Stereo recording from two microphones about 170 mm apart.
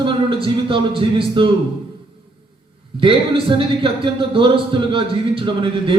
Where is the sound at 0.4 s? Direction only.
30° right (ahead or behind).